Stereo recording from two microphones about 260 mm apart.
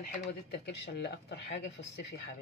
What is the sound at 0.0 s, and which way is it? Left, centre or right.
Speech, left.